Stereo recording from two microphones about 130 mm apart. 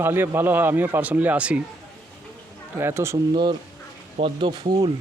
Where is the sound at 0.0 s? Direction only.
15° right (ahead or behind).